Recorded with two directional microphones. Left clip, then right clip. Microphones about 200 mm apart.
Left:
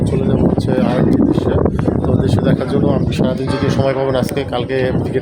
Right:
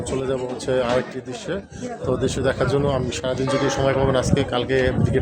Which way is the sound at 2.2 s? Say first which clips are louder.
Left 4 dB; 5° right (ahead or behind).